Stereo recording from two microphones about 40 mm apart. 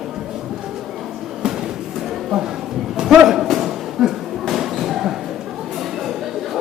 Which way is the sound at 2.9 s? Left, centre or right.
Centre.